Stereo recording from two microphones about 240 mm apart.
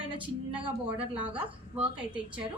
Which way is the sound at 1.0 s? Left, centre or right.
Centre.